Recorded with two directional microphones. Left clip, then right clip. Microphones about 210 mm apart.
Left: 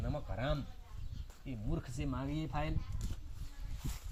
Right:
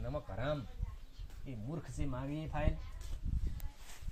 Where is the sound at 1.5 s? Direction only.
40° left (ahead or behind).